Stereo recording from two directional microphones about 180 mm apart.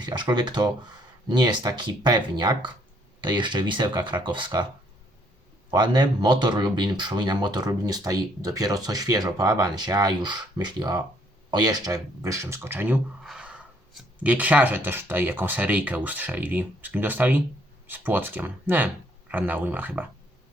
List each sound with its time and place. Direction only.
0.0 s speech: 25° right (ahead or behind)
5.7 s speech: 25° right (ahead or behind)